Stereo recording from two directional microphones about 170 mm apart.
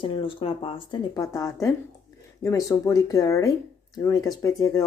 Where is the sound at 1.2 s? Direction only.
15° left (ahead or behind).